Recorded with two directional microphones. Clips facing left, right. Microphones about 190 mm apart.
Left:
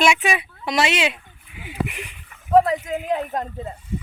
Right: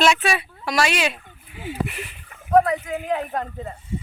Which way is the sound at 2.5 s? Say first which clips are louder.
Left 1 dB; 30° left (ahead or behind).